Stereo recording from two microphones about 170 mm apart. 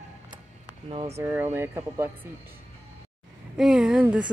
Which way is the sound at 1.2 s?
15° right (ahead or behind).